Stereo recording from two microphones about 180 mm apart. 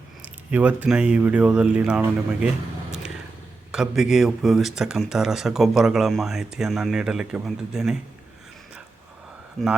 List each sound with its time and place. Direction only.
0.2 s speech: 10° right (ahead or behind)
3.7 s speech: 5° right (ahead or behind)